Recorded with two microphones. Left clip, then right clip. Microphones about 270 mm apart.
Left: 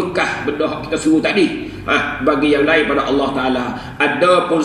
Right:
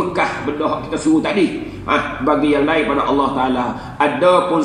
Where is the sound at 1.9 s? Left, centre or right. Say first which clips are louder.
Left 1 dB; left.